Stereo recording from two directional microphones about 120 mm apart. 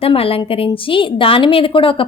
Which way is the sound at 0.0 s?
50° left (ahead or behind).